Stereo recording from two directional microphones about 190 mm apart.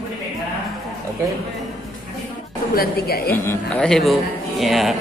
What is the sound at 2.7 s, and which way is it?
Speech, 50° left (ahead or behind).